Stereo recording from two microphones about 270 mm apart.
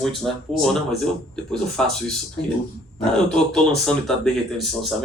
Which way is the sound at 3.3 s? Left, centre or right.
Centre.